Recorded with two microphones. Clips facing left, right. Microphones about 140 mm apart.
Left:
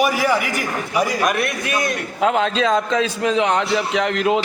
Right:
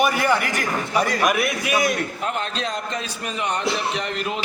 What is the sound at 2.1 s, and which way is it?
A man's voice, 90° left.